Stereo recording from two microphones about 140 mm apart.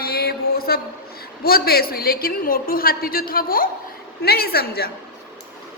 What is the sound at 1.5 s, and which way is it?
A woman's voice, 90° left.